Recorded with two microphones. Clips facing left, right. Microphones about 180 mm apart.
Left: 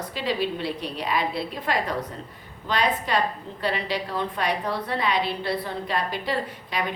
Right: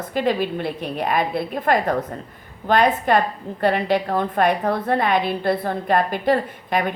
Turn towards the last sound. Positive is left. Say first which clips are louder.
# right 6 dB
turn(degrees=-55)  # may be behind; listen again after turning